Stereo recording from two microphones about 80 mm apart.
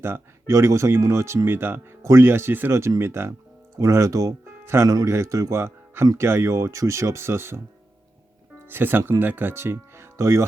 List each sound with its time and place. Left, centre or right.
0.0 s speech: right
8.7 s speech: right